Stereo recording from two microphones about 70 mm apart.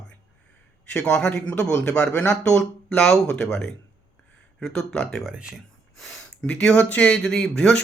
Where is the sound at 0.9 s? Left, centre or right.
Centre.